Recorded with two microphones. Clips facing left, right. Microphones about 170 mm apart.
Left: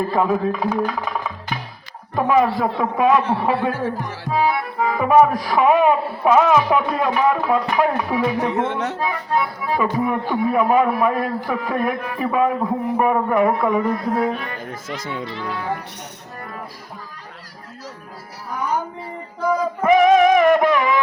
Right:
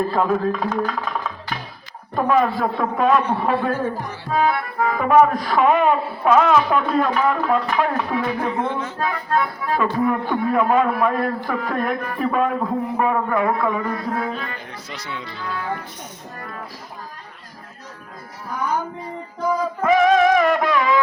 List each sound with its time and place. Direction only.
0.1 s speech: 10° left (ahead or behind)
0.3 s music: 10° left (ahead or behind)
2.2 s speech: 10° left (ahead or behind)
8.5 s speech: 75° left (ahead or behind)
9.0 s speech: 10° left (ahead or behind)
14.7 s speech: 50° left (ahead or behind)
15.4 s speech: 15° left (ahead or behind)
19.8 s music: 15° left (ahead or behind)